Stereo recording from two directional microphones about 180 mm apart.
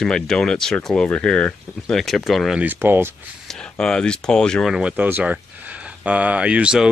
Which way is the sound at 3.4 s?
5° left (ahead or behind).